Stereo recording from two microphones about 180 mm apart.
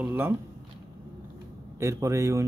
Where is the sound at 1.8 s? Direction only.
15° right (ahead or behind).